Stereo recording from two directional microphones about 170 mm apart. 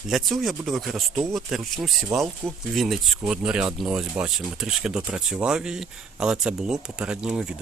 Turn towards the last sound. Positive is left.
turn(degrees=-5)  # may be behind; listen again after turning